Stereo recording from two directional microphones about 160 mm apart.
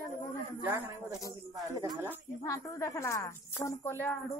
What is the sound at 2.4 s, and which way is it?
Speech, 20° left (ahead or behind).